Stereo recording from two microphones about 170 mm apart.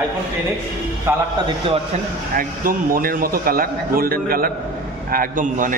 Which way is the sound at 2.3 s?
55° right (ahead or behind).